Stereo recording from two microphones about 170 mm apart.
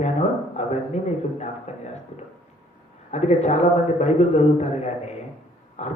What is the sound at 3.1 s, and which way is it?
Speech, 40° left (ahead or behind).